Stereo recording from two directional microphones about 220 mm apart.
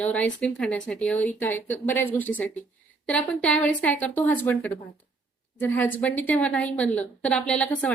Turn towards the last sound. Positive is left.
turn(degrees=5)  # may be behind; listen again after turning